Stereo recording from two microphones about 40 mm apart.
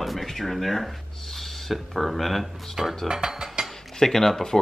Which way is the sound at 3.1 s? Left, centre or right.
Centre.